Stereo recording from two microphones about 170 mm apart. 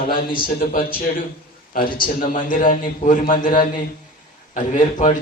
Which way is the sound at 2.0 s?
55° left (ahead or behind).